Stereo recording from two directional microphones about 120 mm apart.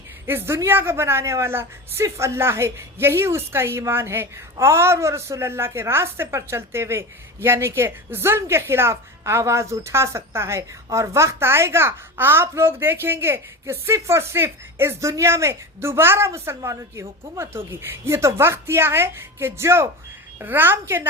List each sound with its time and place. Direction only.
0.3 s a woman's voice: 20° right (ahead or behind)